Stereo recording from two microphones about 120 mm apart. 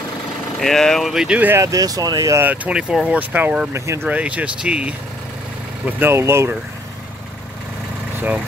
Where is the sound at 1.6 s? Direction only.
30° right (ahead or behind).